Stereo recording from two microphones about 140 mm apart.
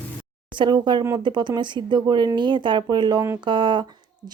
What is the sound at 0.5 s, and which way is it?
Speech, 30° right (ahead or behind).